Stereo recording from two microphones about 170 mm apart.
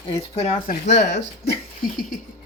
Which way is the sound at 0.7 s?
90° left.